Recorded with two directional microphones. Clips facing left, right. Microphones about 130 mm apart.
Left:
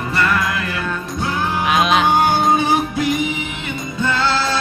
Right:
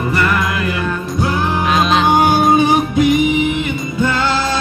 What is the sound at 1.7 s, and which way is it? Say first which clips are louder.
Music: right 1 dB; 10° left (ahead or behind).